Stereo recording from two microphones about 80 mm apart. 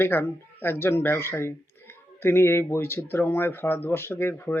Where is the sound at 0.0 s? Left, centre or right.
Left.